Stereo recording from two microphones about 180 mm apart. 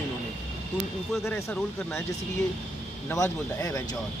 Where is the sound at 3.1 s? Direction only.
15° left (ahead or behind).